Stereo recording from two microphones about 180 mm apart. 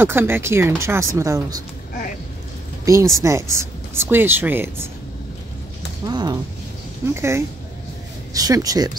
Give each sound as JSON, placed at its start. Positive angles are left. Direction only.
{"t": 0.0, "sound": "speech", "side_deg": -10}
{"t": 2.8, "sound": "speech", "side_deg": -15}
{"t": 6.0, "sound": "speech", "side_deg": -20}